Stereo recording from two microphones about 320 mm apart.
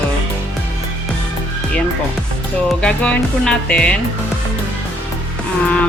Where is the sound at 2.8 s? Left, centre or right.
Centre.